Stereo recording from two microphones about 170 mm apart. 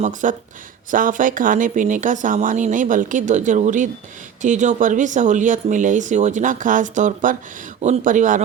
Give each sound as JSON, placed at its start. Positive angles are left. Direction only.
{"t": 0.0, "sound": "speech", "side_deg": -50}